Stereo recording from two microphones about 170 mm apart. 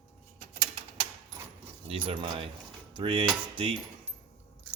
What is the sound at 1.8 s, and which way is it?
Speech, 30° right (ahead or behind).